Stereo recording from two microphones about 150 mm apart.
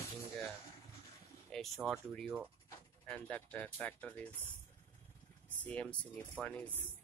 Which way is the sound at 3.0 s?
10° left (ahead or behind).